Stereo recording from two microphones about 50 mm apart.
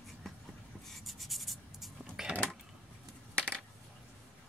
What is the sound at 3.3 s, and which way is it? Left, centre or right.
Coin, left.